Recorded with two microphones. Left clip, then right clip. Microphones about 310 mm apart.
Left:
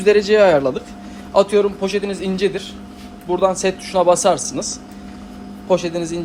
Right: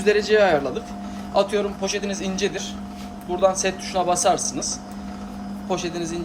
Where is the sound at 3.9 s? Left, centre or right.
Centre.